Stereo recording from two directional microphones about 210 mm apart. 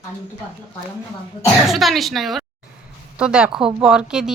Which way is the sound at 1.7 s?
Centre (ahead or behind).